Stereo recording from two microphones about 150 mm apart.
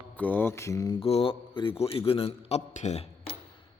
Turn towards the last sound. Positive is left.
turn(degrees=45)  # may be behind; listen again after turning